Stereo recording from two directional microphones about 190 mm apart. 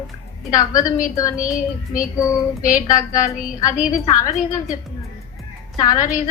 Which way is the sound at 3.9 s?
15° left (ahead or behind).